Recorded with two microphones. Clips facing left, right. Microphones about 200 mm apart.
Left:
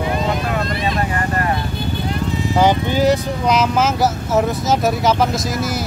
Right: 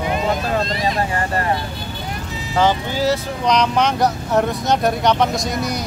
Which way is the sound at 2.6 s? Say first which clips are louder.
Left 2 dB; 15° left (ahead or behind).